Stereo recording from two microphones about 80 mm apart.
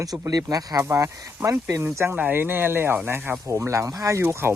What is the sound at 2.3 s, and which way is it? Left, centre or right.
Speech, right.